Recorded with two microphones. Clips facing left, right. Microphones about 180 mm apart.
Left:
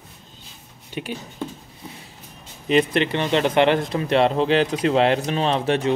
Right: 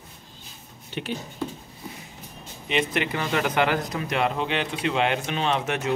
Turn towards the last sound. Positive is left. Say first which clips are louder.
# left 5 dB
turn(degrees=30)  # may be behind; listen again after turning